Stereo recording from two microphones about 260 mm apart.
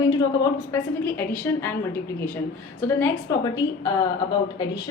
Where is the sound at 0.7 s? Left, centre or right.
Centre.